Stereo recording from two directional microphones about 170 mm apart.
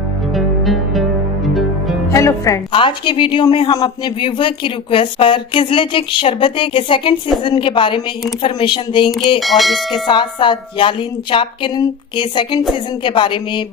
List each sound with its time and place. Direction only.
2.1 s speech: 20° left (ahead or behind)
2.7 s speech: 30° left (ahead or behind)
9.4 s bell: centre (ahead or behind)
10.0 s speech: 25° left (ahead or behind)